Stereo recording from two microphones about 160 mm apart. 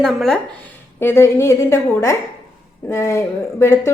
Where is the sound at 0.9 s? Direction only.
15° left (ahead or behind).